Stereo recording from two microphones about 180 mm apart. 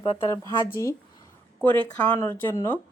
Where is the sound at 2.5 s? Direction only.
15° left (ahead or behind).